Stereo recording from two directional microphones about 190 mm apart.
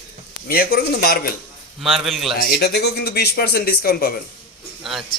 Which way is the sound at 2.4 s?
60° left (ahead or behind).